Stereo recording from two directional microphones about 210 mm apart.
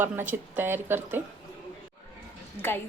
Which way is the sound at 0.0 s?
10° right (ahead or behind).